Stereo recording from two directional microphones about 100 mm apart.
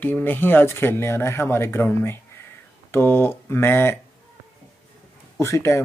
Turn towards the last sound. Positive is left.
turn(degrees=30)  # may be behind; listen again after turning